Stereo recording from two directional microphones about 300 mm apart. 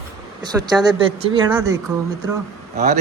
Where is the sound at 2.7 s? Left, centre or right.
Right.